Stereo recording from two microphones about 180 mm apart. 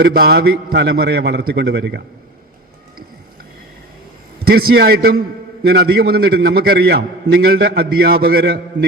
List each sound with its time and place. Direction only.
0.0 s a man's voice: 60° right (ahead or behind)
4.4 s a man's voice: 60° right (ahead or behind)
8.7 s a man's voice: 90° right